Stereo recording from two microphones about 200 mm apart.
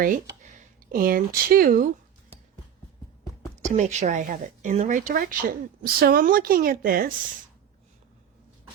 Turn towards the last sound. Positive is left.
turn(degrees=-45)  # may be behind; listen again after turning